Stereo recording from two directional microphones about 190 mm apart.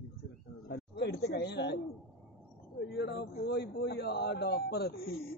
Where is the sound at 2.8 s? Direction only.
60° left (ahead or behind).